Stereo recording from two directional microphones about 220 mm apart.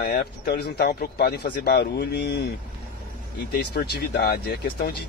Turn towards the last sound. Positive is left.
turn(degrees=45)  # may be behind; listen again after turning